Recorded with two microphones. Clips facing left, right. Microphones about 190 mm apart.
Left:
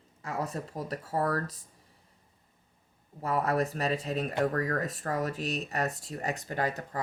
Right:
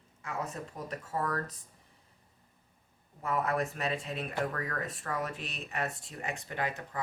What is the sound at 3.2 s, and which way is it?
Speech, 35° left (ahead or behind).